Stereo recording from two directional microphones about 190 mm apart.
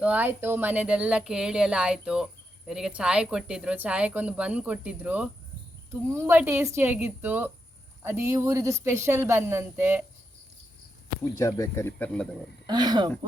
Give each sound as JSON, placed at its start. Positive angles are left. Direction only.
{"t": 0.0, "sound": "speech", "side_deg": -10}
{"t": 11.3, "sound": "speech", "side_deg": 15}
{"t": 12.6, "sound": "speech", "side_deg": -20}